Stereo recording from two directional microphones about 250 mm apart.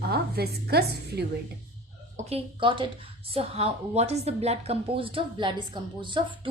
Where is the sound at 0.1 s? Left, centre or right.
Right.